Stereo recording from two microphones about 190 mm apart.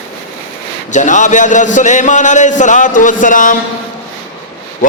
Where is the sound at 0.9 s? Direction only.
40° left (ahead or behind).